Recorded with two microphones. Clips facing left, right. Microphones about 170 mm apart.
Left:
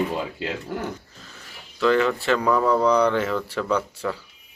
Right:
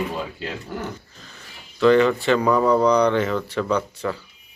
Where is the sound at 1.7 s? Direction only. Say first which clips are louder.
Right 4 dB; centre (ahead or behind).